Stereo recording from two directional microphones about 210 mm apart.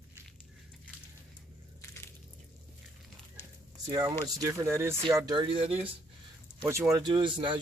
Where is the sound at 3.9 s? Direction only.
20° right (ahead or behind).